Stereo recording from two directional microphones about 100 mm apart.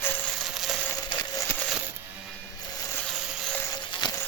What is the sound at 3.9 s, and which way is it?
Music, 45° left (ahead or behind).